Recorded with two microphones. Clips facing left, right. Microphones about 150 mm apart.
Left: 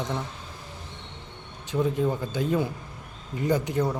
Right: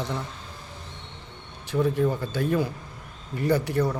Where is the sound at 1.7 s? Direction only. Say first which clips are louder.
Right 2 dB; 20° left (ahead or behind).